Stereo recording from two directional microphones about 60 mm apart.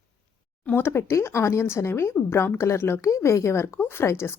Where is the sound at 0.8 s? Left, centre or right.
Left.